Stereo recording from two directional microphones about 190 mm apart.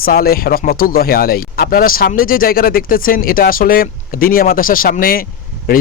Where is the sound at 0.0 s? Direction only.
50° left (ahead or behind).